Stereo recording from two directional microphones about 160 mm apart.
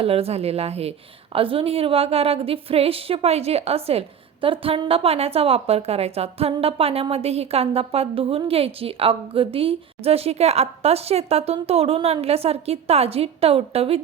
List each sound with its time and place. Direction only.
0.0 s a woman's voice: 40° right (ahead or behind)